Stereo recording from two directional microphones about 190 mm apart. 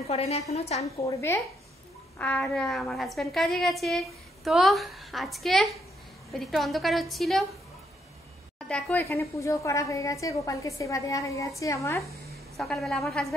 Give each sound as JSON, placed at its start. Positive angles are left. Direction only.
{"t": 0.0, "sound": "a woman's voice", "side_deg": 35}
{"t": 0.9, "sound": "a woman's voice", "side_deg": 15}
{"t": 8.6, "sound": "a woman's voice", "side_deg": 5}
{"t": 12.5, "sound": "a woman's voice", "side_deg": 0}